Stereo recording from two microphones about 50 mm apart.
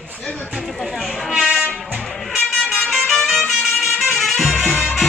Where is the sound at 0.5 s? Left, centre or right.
Centre.